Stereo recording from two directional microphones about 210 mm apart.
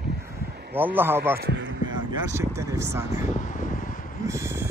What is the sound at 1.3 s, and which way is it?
Speech, 55° right (ahead or behind).